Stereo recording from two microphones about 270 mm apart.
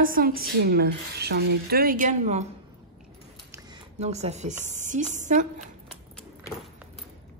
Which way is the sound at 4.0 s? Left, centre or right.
Right.